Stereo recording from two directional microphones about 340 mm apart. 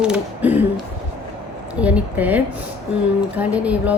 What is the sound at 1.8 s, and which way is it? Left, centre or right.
A woman's voice, centre.